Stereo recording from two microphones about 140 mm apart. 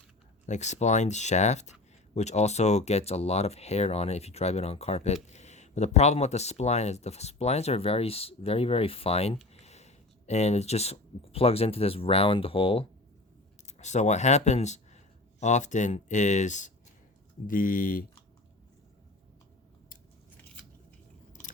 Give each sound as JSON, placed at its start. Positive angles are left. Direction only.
{"t": 0.4, "sound": "speech", "side_deg": 55}
{"t": 13.7, "sound": "speech", "side_deg": 55}
{"t": 17.4, "sound": "speech", "side_deg": 80}